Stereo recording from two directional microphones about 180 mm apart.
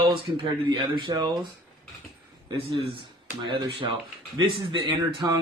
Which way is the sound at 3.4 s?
30° right (ahead or behind).